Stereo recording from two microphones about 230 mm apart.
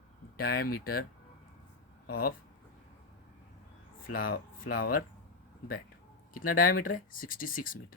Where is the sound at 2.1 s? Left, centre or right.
Left.